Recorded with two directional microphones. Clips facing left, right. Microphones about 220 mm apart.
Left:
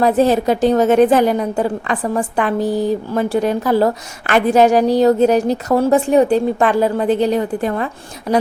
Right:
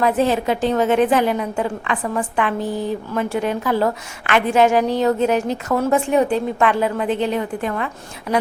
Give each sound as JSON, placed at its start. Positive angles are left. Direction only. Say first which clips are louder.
{"t": 0.0, "sound": "a woman's voice", "louder": "left 4 dB", "side_deg": 40}